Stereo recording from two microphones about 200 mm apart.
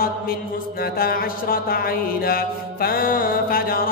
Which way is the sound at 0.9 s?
50° left (ahead or behind).